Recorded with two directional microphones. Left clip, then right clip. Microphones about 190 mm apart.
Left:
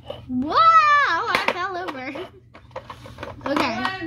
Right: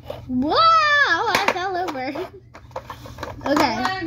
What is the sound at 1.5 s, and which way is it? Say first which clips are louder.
Hands: right 3 dB; 40° left (ahead or behind).